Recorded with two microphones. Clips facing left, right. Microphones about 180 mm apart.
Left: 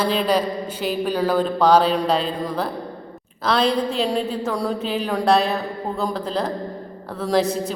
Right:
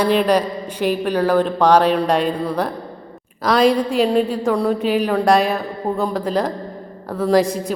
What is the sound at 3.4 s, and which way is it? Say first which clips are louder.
A woman's voice: right 4 dB; 10° right (ahead or behind).